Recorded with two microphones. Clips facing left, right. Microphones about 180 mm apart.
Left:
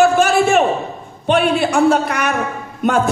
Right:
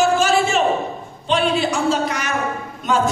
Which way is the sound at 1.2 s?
60° left (ahead or behind).